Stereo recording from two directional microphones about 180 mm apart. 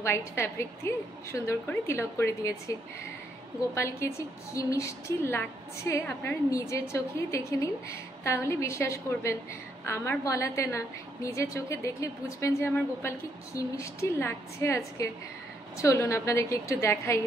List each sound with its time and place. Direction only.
0.0 s a woman's voice: 15° left (ahead or behind)
3.7 s a woman's voice: 15° left (ahead or behind)